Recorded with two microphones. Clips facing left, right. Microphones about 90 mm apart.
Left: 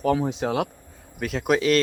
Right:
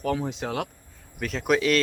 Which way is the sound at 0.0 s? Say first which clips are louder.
Left 5 dB; 20° left (ahead or behind).